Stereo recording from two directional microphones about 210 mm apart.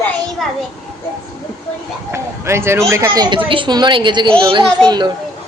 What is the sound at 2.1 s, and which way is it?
Speech, 10° right (ahead or behind).